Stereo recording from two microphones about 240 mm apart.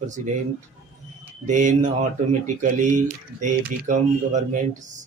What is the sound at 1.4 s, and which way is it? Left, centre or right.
Speech, right.